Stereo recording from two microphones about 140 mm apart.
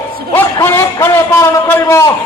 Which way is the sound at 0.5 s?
20° left (ahead or behind).